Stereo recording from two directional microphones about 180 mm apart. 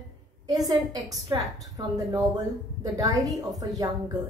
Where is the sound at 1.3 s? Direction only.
25° right (ahead or behind).